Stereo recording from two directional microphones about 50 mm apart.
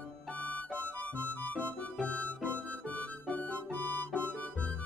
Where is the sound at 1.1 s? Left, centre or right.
Left.